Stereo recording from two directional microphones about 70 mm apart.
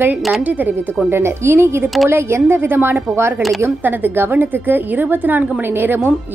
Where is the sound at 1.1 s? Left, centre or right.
Right.